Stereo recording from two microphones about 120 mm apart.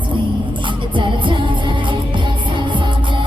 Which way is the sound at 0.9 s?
45° right (ahead or behind).